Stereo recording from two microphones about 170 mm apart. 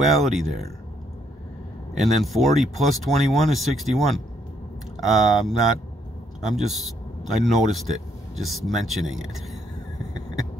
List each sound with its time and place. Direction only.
0.0 s speech: centre (ahead or behind)
2.0 s speech: centre (ahead or behind)